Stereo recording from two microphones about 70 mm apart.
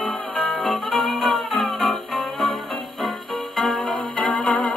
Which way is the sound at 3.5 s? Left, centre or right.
Centre.